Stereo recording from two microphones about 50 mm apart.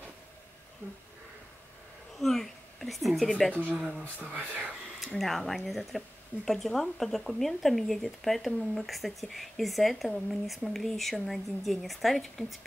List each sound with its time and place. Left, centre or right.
2.1 s a sound: centre
3.3 s speech: centre
4.0 s speech: right
5.2 s speech: centre